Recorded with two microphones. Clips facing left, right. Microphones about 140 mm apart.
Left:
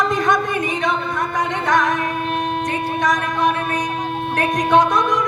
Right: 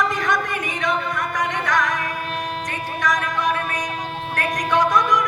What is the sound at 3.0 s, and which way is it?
Music, 25° left (ahead or behind).